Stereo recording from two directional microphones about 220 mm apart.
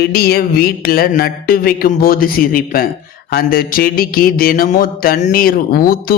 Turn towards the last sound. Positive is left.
turn(degrees=40)  # may be behind; listen again after turning